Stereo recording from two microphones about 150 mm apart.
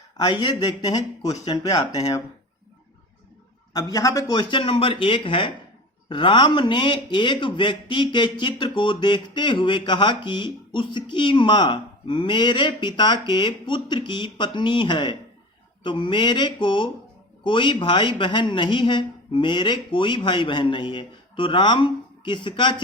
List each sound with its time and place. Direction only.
0.2 s speech: 30° left (ahead or behind)
3.7 s a man's voice: 25° left (ahead or behind)